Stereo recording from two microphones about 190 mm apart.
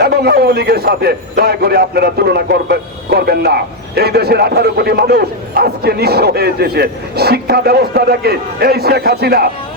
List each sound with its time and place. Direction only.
0.0 s a man's voice: 55° right (ahead or behind)